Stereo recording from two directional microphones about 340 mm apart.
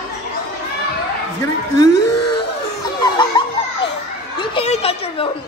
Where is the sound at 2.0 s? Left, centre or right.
Left.